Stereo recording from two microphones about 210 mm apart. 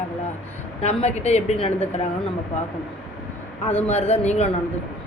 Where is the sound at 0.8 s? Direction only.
30° left (ahead or behind).